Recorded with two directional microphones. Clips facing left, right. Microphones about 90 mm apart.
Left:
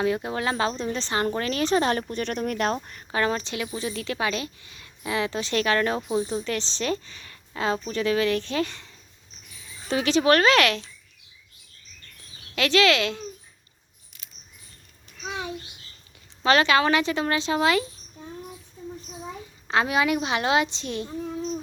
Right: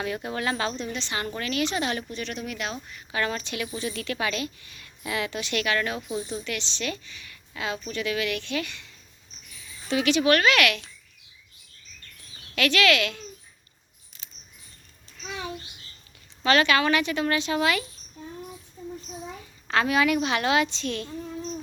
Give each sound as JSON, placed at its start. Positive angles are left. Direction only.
{"t": 0.0, "sound": "speech", "side_deg": 25}
{"t": 3.1, "sound": "speech", "side_deg": 30}
{"t": 9.9, "sound": "speech", "side_deg": 30}
{"t": 12.5, "sound": "a woman's voice", "side_deg": 25}
{"t": 16.4, "sound": "a woman's voice", "side_deg": 25}
{"t": 19.6, "sound": "a woman's voice", "side_deg": 20}